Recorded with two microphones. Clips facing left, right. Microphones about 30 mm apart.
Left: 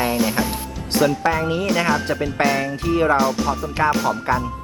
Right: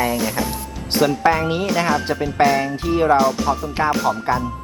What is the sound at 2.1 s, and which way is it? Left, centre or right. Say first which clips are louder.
Speech: right 3 dB; centre.